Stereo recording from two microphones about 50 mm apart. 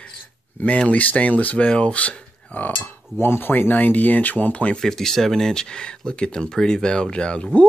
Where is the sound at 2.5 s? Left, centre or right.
Left.